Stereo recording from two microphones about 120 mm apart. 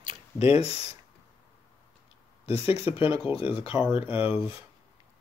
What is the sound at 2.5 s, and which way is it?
Speech, 50° left (ahead or behind).